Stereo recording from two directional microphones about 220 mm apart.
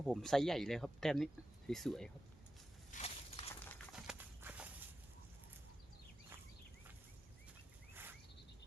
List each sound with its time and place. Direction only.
0.0 s speech: centre (ahead or behind)
2.9 s a sound: 30° left (ahead or behind)
3.9 s walk: 5° right (ahead or behind)